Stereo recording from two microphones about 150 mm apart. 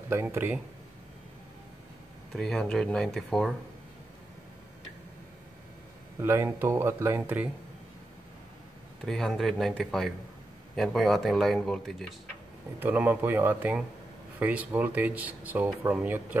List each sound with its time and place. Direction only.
0.1 s speech: 15° right (ahead or behind)
2.3 s speech: 5° left (ahead or behind)
6.2 s speech: 15° right (ahead or behind)
9.0 s speech: 5° left (ahead or behind)
12.7 s speech: 10° right (ahead or behind)